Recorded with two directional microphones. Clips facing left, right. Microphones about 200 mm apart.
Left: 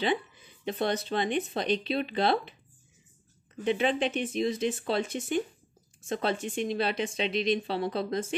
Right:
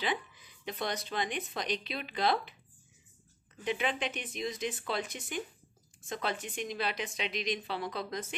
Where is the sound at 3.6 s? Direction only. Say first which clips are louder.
Left 7 dB; 30° left (ahead or behind).